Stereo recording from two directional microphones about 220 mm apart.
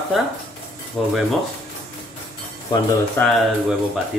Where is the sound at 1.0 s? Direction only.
5° left (ahead or behind).